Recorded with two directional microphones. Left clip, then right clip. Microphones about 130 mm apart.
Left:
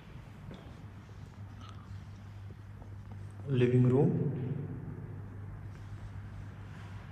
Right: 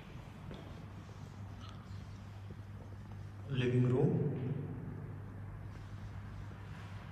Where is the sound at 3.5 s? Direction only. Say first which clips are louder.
Left 6 dB; 20° right (ahead or behind).